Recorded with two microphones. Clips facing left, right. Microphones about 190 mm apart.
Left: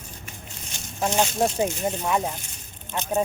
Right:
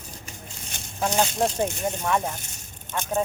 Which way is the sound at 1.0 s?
15° left (ahead or behind).